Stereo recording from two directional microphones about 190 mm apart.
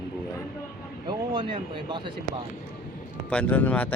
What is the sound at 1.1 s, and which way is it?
Speech, 25° right (ahead or behind).